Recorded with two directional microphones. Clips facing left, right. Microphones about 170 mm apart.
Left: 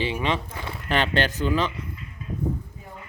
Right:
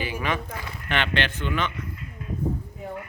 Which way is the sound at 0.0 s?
25° left (ahead or behind).